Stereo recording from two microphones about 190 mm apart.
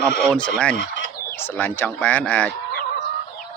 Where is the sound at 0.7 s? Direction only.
65° left (ahead or behind).